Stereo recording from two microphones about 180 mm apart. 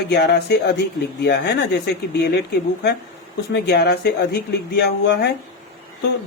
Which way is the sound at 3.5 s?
65° left (ahead or behind).